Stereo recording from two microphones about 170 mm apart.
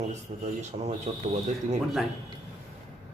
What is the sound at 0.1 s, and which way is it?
Speech, 40° right (ahead or behind).